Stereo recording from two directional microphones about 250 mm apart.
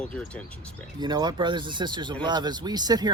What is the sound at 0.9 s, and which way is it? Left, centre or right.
Speech, centre.